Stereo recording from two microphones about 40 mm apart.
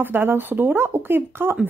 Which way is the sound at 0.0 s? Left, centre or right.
Right.